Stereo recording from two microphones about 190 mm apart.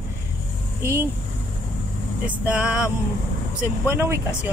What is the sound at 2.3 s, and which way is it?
Speech, 5° right (ahead or behind).